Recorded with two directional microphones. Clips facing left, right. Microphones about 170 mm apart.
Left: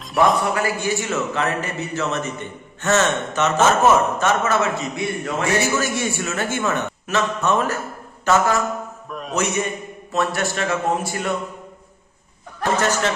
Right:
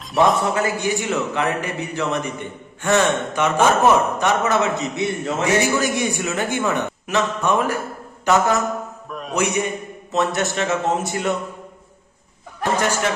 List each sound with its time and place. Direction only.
0.4 s a man's voice: 20° right (ahead or behind)
9.0 s a man's voice: centre (ahead or behind)
9.3 s a man's voice: 15° right (ahead or behind)
12.7 s a man's voice: 10° right (ahead or behind)